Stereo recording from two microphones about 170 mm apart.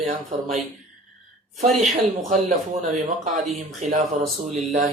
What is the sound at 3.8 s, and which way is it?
Speech, 45° right (ahead or behind).